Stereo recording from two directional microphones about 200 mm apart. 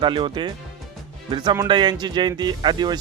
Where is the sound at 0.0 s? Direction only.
25° right (ahead or behind).